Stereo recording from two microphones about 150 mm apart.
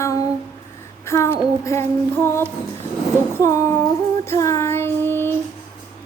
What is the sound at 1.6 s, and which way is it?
Music, 20° left (ahead or behind).